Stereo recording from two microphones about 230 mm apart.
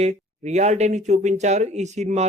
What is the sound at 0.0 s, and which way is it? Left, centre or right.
Speech, right.